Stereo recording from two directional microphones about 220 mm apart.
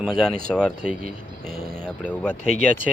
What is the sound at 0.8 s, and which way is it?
Speech, 40° right (ahead or behind).